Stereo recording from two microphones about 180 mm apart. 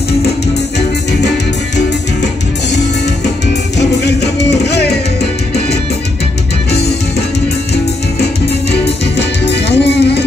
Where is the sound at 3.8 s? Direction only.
70° left (ahead or behind).